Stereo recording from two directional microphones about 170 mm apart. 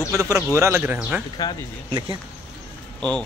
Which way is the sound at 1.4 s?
20° left (ahead or behind).